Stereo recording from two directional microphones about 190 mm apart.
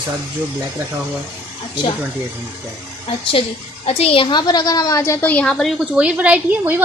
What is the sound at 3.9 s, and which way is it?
A woman's voice, 30° left (ahead or behind).